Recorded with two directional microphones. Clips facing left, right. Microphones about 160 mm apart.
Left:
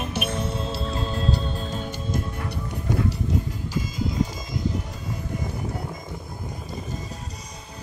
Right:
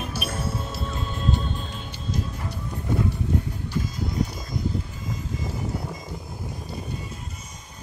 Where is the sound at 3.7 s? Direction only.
90° left.